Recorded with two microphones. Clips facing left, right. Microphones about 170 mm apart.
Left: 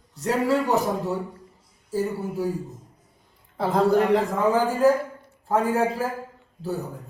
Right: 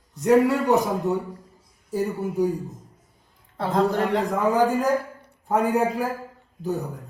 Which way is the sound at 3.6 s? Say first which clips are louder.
Left 2 dB; 5° left (ahead or behind).